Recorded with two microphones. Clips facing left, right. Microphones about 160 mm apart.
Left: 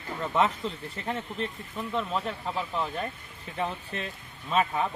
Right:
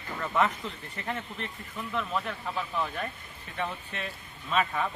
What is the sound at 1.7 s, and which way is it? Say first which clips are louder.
Speech: left 2 dB; 25° left (ahead or behind).